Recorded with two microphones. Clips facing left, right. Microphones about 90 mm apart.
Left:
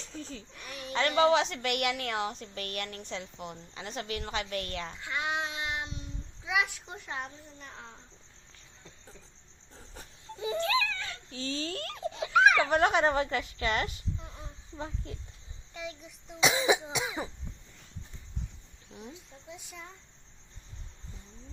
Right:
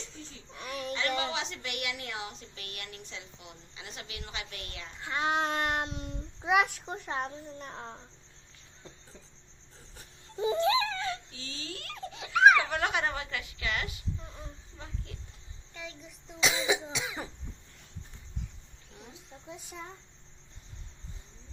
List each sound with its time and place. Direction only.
0.5 s a sound: 45° right (ahead or behind)
0.9 s a woman's voice: 50° left (ahead or behind)
4.9 s a child's voice: 35° right (ahead or behind)
9.7 s cricket: 35° left (ahead or behind)
10.3 s a sound: 25° right (ahead or behind)
11.3 s speech: 40° left (ahead or behind)
15.7 s a child's voice: 15° left (ahead or behind)
16.4 s cough: 25° left (ahead or behind)
19.5 s a child's voice: 35° right (ahead or behind)